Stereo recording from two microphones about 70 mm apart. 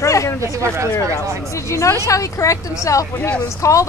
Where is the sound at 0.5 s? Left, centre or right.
Right.